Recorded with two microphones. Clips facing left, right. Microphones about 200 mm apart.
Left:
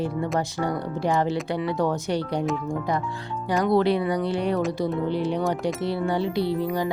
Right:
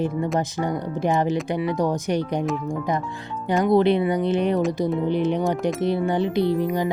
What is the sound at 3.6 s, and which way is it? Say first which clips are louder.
Speech: right 3 dB; 20° right (ahead or behind).